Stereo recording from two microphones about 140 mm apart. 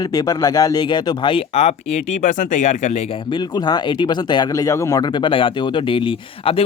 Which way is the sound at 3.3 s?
35° left (ahead or behind).